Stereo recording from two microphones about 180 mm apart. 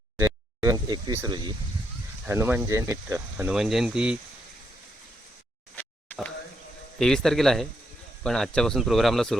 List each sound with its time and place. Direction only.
0.2 s speech: 15° right (ahead or behind)
5.7 s a sound: 10° left (ahead or behind)
7.0 s speech: 5° left (ahead or behind)